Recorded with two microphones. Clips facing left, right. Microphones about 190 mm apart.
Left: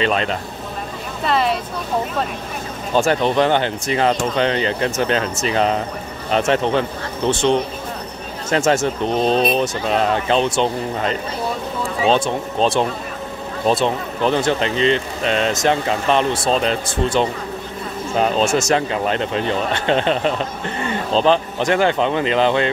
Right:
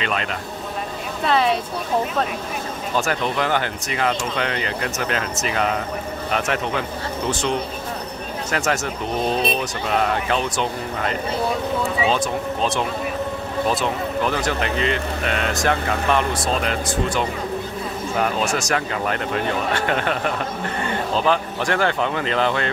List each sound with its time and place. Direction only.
0.0 s speech: 30° left (ahead or behind)
1.2 s speech: centre (ahead or behind)
2.9 s speech: 30° left (ahead or behind)